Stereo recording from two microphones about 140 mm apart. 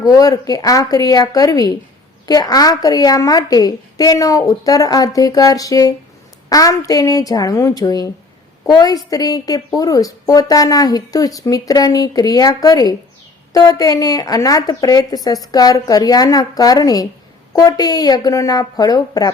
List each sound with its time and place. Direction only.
0.0 s a woman's voice: 25° left (ahead or behind)